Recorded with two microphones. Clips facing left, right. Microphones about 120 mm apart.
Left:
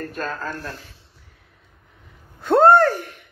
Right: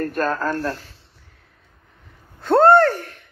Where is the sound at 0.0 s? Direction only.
50° right (ahead or behind).